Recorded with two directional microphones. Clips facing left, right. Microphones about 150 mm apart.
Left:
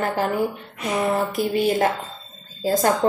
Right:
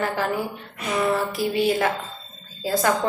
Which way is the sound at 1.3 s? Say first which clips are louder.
Left 1 dB; 45° left (ahead or behind).